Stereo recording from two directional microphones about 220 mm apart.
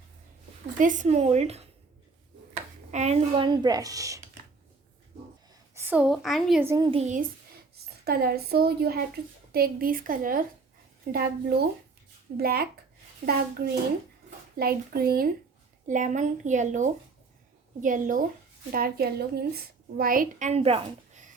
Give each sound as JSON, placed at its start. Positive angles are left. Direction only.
{"t": 0.8, "sound": "a woman's voice", "side_deg": -35}
{"t": 2.9, "sound": "a woman's voice", "side_deg": -30}
{"t": 5.7, "sound": "a woman's voice", "side_deg": -10}
{"t": 6.7, "sound": "a woman's voice", "side_deg": -20}
{"t": 7.0, "sound": "a woman's voice", "side_deg": -35}
{"t": 14.5, "sound": "a woman's voice", "side_deg": -45}